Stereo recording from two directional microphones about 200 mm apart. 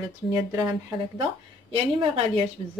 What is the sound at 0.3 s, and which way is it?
Speech, 10° right (ahead or behind).